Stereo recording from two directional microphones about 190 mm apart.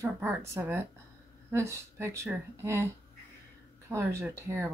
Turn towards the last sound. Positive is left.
turn(degrees=-15)  # may be behind; listen again after turning